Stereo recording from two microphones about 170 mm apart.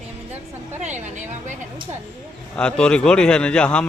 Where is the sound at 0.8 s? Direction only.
45° right (ahead or behind).